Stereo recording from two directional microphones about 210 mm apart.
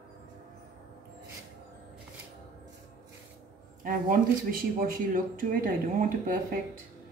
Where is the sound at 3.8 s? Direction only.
40° right (ahead or behind).